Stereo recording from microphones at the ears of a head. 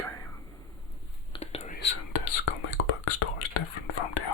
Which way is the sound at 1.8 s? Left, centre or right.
Left.